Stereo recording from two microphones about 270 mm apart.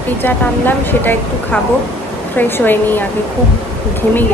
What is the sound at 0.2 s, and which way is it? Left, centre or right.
Speech, centre.